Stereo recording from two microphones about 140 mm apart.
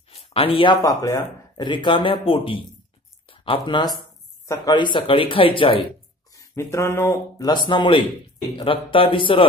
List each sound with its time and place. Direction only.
0.1 s a sound: 45° left (ahead or behind)
0.7 s speech: 25° left (ahead or behind)
6.3 s speech: 20° left (ahead or behind)
7.4 s speech: 35° left (ahead or behind)